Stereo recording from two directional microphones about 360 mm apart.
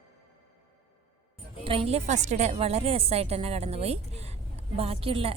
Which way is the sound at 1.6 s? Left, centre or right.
Centre.